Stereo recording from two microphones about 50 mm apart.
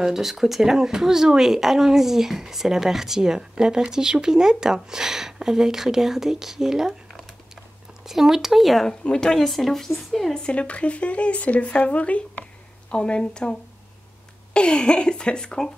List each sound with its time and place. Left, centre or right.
0.0 s speech: centre
8.1 s speech: centre
8.8 s speech: centre
10.4 s speech: left